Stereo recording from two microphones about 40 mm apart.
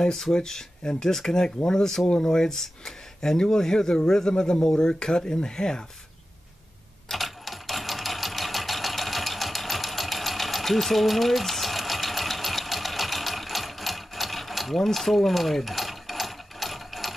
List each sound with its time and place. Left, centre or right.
0.0 s speech: centre
7.1 s sewing machine: centre